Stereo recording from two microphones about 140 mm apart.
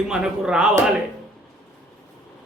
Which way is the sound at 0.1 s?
5° right (ahead or behind).